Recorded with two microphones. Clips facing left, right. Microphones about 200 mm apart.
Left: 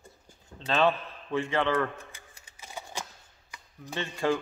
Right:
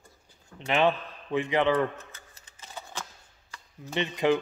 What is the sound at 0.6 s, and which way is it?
A man's voice, 15° right (ahead or behind).